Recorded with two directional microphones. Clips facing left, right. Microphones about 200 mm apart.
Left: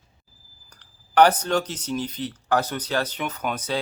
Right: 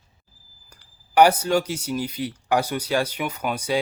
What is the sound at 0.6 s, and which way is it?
Speech, 10° right (ahead or behind).